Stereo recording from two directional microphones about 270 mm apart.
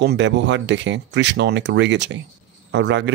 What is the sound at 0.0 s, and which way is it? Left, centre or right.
Speech, right.